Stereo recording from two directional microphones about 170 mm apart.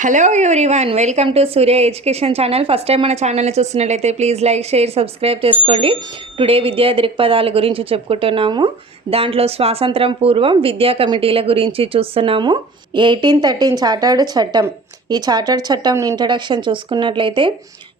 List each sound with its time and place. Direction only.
0.0 s a woman's voice: 45° right (ahead or behind); by 17.5 s 30° right (ahead or behind)